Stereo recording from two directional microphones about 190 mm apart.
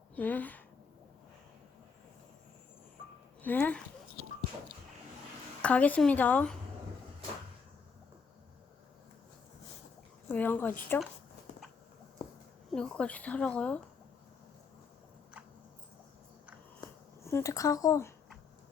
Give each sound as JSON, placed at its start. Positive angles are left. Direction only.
{"t": 0.2, "sound": "speech", "side_deg": 10}
{"t": 3.4, "sound": "speech", "side_deg": 10}
{"t": 5.6, "sound": "speech", "side_deg": 5}
{"t": 10.2, "sound": "speech", "side_deg": 10}
{"t": 12.7, "sound": "speech", "side_deg": 5}
{"t": 17.2, "sound": "speech", "side_deg": 15}